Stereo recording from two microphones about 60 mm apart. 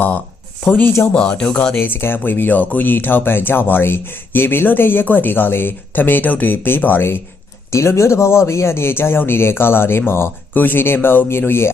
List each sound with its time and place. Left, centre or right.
0.7 s speech: left
1.1 s speech: centre
1.7 s speech: left
7.7 s speech: left